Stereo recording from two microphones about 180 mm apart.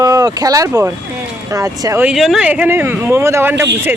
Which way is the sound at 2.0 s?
Centre (ahead or behind).